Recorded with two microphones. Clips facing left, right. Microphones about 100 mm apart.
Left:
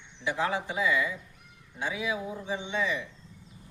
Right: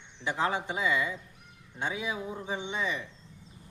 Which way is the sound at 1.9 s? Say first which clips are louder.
Left 2 dB; 35° right (ahead or behind).